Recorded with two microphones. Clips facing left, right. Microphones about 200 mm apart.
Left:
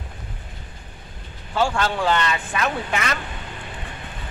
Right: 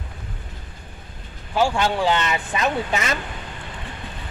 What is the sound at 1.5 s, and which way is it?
Speech, 15° right (ahead or behind).